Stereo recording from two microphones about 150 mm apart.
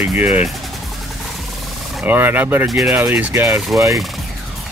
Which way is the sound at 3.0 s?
15° right (ahead or behind).